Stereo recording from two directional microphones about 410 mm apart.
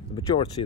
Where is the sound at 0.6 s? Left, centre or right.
Left.